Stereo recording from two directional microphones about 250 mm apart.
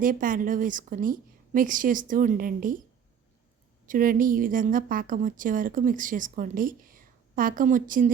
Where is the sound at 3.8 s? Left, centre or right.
Right.